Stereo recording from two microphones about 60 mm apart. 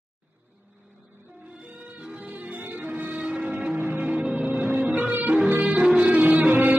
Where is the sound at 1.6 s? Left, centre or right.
Centre.